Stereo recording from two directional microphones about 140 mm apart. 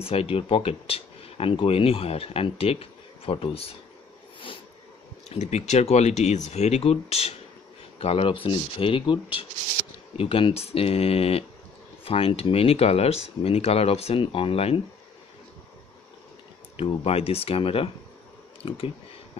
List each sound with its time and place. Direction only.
0.0 s speech: 45° left (ahead or behind)
5.3 s speech: 50° left (ahead or behind)
16.7 s speech: 45° left (ahead or behind)